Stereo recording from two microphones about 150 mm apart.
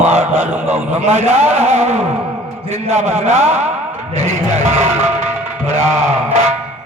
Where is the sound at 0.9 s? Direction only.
45° right (ahead or behind).